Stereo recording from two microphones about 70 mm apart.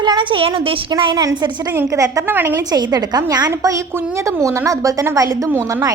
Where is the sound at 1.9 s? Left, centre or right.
Right.